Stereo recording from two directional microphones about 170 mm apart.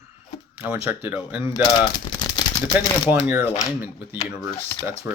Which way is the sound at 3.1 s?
10° right (ahead or behind).